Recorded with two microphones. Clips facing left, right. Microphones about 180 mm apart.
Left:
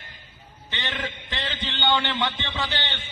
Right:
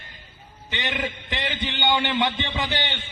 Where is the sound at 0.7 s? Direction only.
15° right (ahead or behind).